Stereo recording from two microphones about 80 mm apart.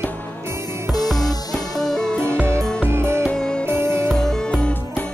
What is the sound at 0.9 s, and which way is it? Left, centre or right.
Music, left.